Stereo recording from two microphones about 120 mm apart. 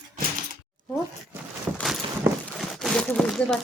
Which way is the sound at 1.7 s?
10° right (ahead or behind).